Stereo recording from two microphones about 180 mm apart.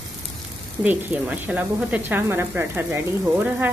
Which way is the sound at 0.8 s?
10° right (ahead or behind).